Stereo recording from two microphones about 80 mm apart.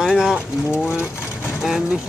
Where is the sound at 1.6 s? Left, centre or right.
Centre.